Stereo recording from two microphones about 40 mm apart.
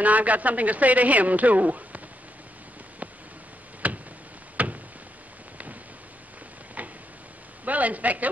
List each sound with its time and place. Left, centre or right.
0.0 s a man's voice: right
3.8 s tick-tock: right
4.6 s a sound: right
6.8 s tick-tock: right
7.6 s a man's voice: right